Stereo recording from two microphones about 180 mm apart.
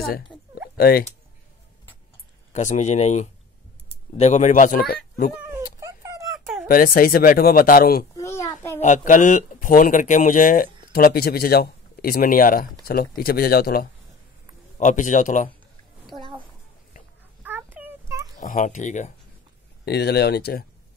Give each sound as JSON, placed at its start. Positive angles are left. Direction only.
{"t": 0.7, "sound": "speech", "side_deg": 55}
{"t": 2.5, "sound": "speech", "side_deg": 40}
{"t": 5.8, "sound": "dog", "side_deg": -20}
{"t": 6.4, "sound": "a sound", "side_deg": 0}
{"t": 6.7, "sound": "speech", "side_deg": 50}
{"t": 8.2, "sound": "a sound", "side_deg": 15}
{"t": 8.7, "sound": "speech", "side_deg": 45}
{"t": 14.8, "sound": "speech", "side_deg": 45}
{"t": 17.4, "sound": "a sound", "side_deg": -10}
{"t": 18.4, "sound": "speech", "side_deg": 45}
{"t": 19.8, "sound": "speech", "side_deg": 65}